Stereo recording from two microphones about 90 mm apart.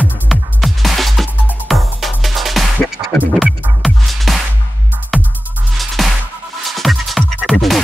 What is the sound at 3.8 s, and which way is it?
Music, centre (ahead or behind).